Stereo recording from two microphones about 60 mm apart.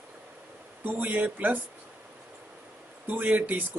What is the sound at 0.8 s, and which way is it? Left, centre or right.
Speech, right.